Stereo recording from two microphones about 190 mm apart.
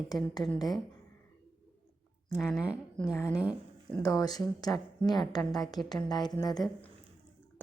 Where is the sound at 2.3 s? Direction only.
5° right (ahead or behind).